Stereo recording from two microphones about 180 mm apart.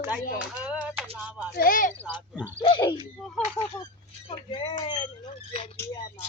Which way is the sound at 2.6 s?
25° left (ahead or behind).